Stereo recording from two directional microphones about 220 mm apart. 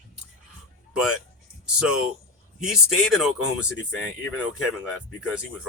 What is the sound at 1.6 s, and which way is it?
Speech, 5° right (ahead or behind).